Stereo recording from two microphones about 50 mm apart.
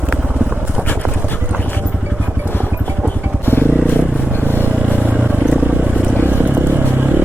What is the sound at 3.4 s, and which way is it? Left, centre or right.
Vehicle, left.